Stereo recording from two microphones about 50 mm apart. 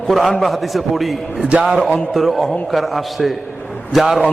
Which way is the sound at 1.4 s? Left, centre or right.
Centre.